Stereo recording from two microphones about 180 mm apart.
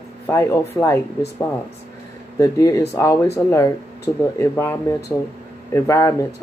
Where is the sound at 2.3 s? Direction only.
15° left (ahead or behind).